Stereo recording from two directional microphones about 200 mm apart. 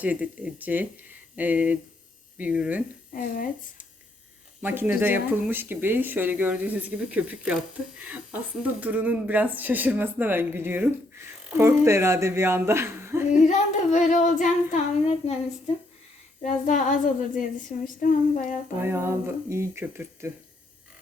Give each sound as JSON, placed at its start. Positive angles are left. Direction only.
{"t": 0.0, "sound": "speech", "side_deg": -5}
{"t": 3.1, "sound": "speech", "side_deg": 45}
{"t": 4.6, "sound": "speech", "side_deg": -10}
{"t": 13.5, "sound": "child singing", "side_deg": 35}
{"t": 16.4, "sound": "child singing", "side_deg": 40}
{"t": 18.8, "sound": "speech", "side_deg": -10}